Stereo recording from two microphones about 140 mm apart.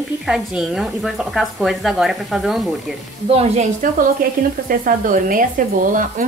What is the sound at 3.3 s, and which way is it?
Speech, 45° right (ahead or behind).